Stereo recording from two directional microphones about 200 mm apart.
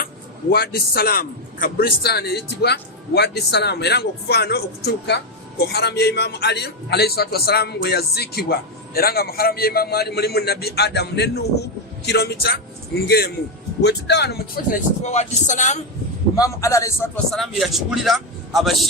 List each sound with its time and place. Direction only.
0.5 s speech: 50° left (ahead or behind)
13.8 s speech: 55° left (ahead or behind); by 15.8 s 40° left (ahead or behind)
16.3 s a man's voice: 15° left (ahead or behind)
17.3 s speech: centre (ahead or behind)